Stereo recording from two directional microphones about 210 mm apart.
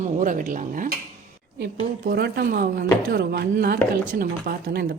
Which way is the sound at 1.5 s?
50° right (ahead or behind).